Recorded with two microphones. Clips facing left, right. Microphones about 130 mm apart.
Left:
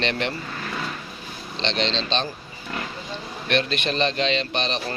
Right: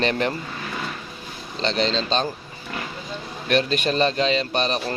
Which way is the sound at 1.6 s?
40° right (ahead or behind).